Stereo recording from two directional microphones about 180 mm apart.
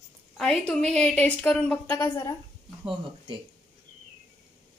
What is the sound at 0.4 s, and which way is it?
A woman's voice, 5° left (ahead or behind).